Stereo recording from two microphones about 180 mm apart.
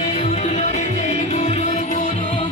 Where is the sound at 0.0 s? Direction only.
35° left (ahead or behind).